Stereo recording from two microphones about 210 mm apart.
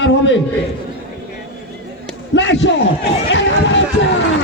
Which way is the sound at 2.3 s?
60° left (ahead or behind).